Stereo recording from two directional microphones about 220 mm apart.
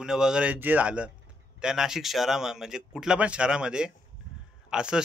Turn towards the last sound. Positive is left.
turn(degrees=-5)  # may be behind; listen again after turning